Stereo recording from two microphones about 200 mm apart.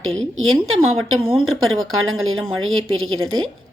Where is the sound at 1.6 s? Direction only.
90° right.